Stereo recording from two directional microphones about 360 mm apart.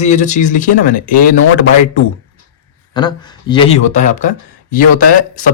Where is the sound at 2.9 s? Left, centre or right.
Centre.